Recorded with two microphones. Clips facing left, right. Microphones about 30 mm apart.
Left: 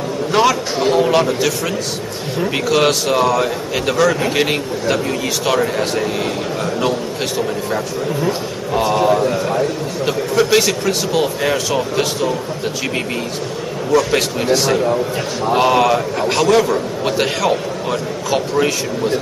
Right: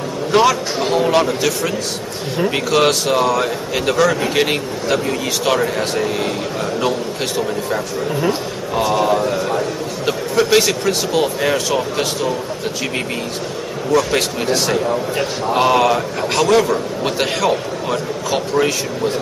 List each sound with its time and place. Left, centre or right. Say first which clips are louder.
0.3 s a man's voice: right 1 dB; centre
8.3 s a man's voice: left 1 dB; centre
13.9 s a man's voice: left 1 dB; centre